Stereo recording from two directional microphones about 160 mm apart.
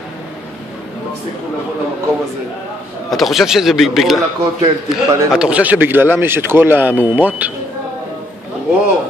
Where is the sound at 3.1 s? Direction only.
Centre (ahead or behind).